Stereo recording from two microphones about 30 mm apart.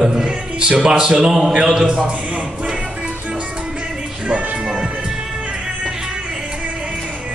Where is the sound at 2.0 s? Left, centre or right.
Right.